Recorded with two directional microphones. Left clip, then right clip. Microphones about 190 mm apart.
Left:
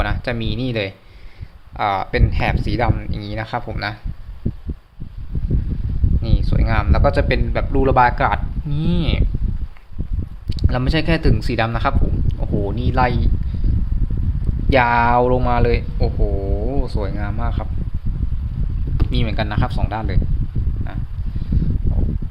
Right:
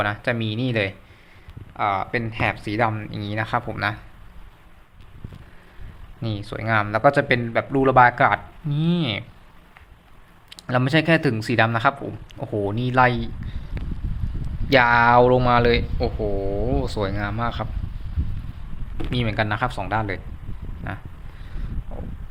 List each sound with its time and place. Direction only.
0.0 s speech: 15° left (ahead or behind)
1.7 s speech: 30° left (ahead or behind); by 3.9 s 10° left (ahead or behind)
6.2 s speech: 10° left (ahead or behind)
10.5 s speech: 5° left (ahead or behind)
14.7 s speech: centre (ahead or behind)
19.1 s speech: 5° left (ahead or behind)